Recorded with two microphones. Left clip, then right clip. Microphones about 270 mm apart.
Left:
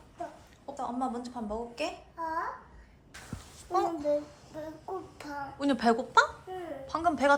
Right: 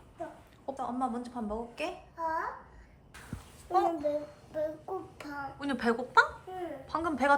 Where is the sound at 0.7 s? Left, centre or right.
Centre.